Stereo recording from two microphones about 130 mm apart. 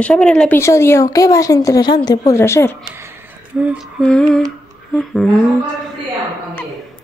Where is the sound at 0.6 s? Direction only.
20° left (ahead or behind).